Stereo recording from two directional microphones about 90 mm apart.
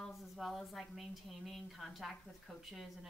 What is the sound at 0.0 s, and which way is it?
A woman's voice, centre (ahead or behind).